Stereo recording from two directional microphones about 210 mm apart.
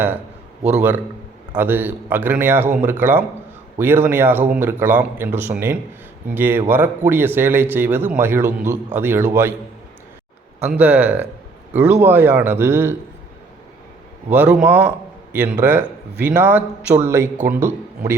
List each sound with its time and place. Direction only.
0.6 s a man's voice: 5° right (ahead or behind)
10.6 s a man's voice: 5° right (ahead or behind)
14.3 s a man's voice: 5° right (ahead or behind)